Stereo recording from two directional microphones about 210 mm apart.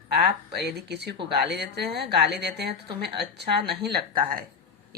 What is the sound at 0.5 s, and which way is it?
Speech, 50° right (ahead or behind).